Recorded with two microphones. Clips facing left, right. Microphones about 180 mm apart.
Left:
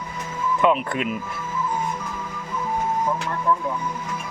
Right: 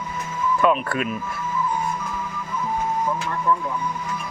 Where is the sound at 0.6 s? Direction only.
20° left (ahead or behind).